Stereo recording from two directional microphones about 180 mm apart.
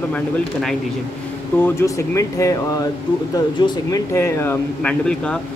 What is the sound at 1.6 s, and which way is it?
Speech, 15° left (ahead or behind).